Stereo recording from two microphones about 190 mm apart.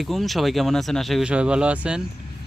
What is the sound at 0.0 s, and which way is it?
Speech, centre (ahead or behind).